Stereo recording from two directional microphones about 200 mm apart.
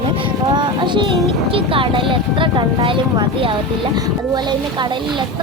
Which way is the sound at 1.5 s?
25° right (ahead or behind).